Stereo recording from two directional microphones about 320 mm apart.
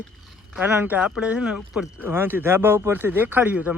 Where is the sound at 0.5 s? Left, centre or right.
Centre.